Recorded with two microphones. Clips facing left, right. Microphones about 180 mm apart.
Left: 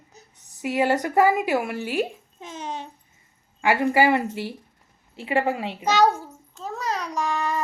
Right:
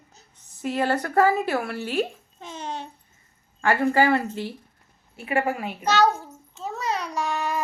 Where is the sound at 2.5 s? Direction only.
45° left (ahead or behind).